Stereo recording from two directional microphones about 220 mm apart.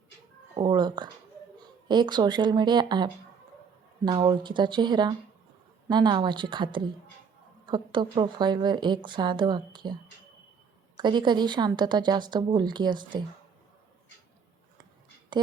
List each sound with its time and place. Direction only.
0.6 s speech: 20° right (ahead or behind)
10.9 s speech: 20° right (ahead or behind)
15.3 s speech: 20° right (ahead or behind)